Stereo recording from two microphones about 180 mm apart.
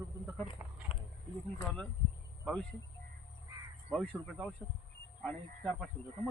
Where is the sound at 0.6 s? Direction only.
15° right (ahead or behind).